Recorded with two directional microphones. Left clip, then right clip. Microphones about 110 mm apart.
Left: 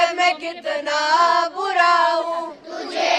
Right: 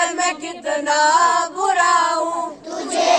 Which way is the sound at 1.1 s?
20° left (ahead or behind).